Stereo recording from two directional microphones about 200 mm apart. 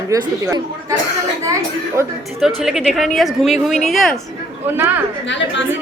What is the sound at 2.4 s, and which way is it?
Speech, centre (ahead or behind).